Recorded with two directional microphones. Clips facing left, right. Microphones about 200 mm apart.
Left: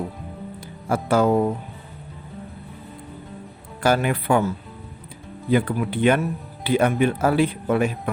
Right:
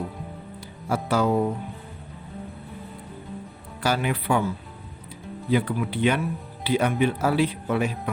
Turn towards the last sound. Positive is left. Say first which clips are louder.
# left 3 dB
turn(degrees=50)  # may be behind; listen again after turning